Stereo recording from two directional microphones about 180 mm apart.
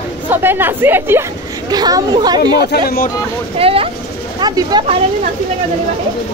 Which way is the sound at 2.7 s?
55° left (ahead or behind).